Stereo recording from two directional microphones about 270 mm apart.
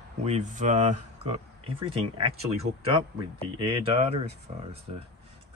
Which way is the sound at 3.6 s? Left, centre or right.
Right.